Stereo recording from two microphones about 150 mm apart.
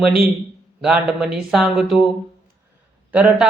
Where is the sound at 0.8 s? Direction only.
5° right (ahead or behind).